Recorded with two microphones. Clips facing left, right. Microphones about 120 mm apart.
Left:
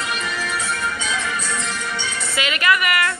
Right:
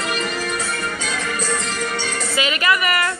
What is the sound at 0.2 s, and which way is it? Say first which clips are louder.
Music: right 2 dB; 50° right (ahead or behind).